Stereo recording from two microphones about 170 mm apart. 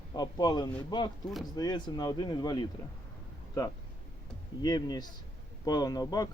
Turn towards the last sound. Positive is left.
turn(degrees=20)  # may be behind; listen again after turning